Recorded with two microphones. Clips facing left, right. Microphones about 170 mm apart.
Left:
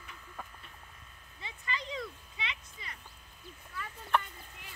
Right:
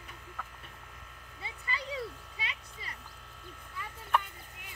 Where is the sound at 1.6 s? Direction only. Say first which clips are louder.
Right 1 dB; 35° right (ahead or behind).